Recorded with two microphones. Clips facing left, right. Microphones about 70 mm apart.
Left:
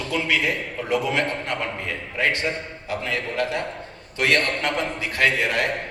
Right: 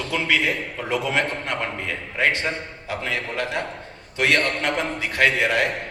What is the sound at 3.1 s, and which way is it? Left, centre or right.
A man's voice, right.